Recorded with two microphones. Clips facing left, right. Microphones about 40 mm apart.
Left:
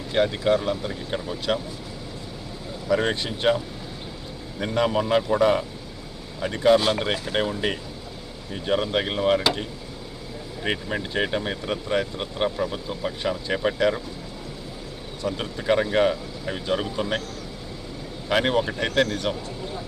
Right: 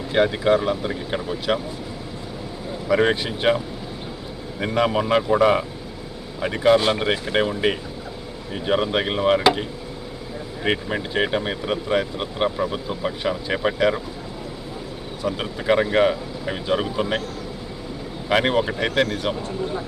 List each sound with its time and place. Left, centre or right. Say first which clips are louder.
0.1 s speech: right 3 dB; centre
2.8 s speech: right 4 dB; centre
4.6 s speech: right 2 dB; centre
15.2 s speech: right 2 dB; centre
18.3 s speech: right 2 dB; centre